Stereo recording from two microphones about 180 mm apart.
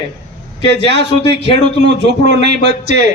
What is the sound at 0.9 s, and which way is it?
Speech, 70° right (ahead or behind).